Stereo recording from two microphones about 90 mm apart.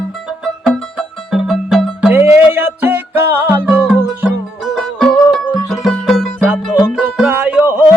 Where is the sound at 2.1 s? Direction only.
25° right (ahead or behind).